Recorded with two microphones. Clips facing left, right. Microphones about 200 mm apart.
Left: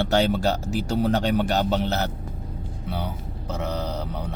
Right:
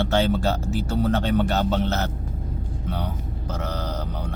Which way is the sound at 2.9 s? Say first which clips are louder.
Even; 10° left (ahead or behind).